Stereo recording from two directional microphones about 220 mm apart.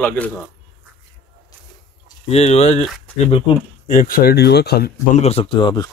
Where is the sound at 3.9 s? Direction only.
40° left (ahead or behind).